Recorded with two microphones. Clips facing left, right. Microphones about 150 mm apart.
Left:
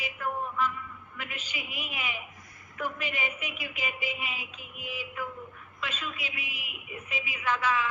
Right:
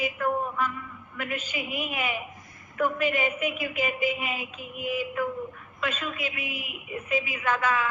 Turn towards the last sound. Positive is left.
turn(degrees=-50)  # may be behind; listen again after turning